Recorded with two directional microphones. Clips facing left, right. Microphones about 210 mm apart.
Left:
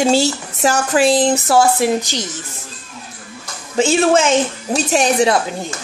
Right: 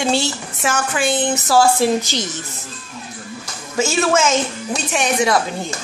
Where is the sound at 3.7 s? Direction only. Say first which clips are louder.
Left 4 dB; 30° left (ahead or behind).